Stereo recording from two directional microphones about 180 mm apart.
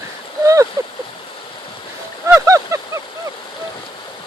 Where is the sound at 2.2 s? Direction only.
15° right (ahead or behind).